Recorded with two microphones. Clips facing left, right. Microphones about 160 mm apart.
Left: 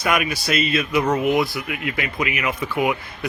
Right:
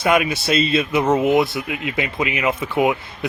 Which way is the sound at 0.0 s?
25° right (ahead or behind).